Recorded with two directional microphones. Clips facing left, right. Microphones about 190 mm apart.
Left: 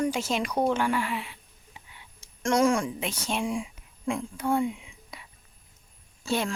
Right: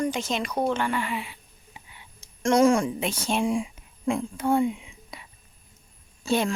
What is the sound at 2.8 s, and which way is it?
Speech, 30° right (ahead or behind).